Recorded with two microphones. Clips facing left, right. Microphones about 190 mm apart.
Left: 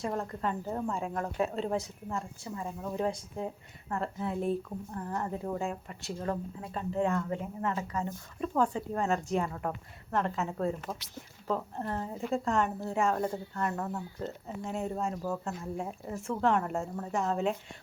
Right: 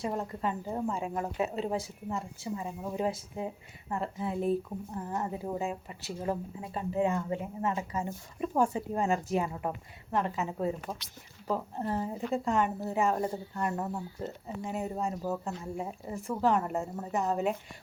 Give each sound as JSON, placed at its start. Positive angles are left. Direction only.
{"t": 0.1, "sound": "speech", "side_deg": -10}
{"t": 4.9, "sound": "speech", "side_deg": -15}
{"t": 14.4, "sound": "speech", "side_deg": -5}